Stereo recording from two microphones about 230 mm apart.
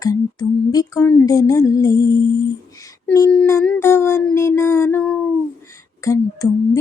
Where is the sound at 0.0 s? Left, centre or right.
Centre.